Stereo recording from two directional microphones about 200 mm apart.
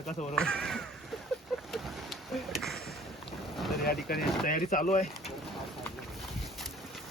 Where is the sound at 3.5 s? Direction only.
Centre (ahead or behind).